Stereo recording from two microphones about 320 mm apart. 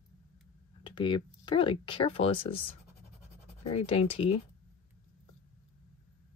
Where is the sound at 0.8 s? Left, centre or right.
Centre.